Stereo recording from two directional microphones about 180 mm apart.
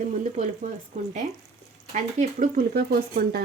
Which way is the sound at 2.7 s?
60° right (ahead or behind).